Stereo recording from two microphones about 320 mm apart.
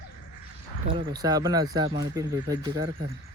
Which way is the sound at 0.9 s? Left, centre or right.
Centre.